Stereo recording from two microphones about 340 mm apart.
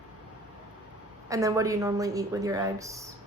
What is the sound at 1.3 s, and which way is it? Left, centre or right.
Speech, centre.